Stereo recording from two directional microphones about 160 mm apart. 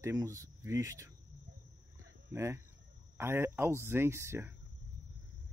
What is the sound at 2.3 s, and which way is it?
Speech, 15° right (ahead or behind).